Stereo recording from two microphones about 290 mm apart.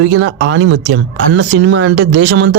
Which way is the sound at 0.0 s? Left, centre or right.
Right.